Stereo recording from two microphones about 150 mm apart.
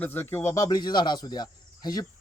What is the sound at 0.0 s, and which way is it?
Speech, 15° left (ahead or behind).